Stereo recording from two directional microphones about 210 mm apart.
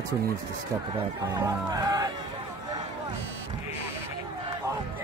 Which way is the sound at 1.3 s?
15° right (ahead or behind).